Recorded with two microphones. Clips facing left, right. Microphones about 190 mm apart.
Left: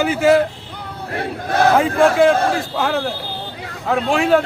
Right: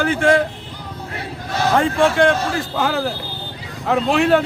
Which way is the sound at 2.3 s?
55° left (ahead or behind).